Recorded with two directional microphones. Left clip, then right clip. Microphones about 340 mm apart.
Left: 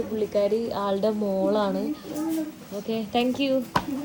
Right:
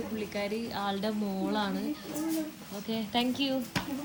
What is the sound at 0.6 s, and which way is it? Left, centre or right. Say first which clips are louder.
Speech: left 8 dB; centre.